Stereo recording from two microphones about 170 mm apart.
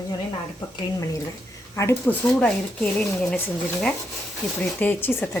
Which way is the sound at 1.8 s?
15° left (ahead or behind).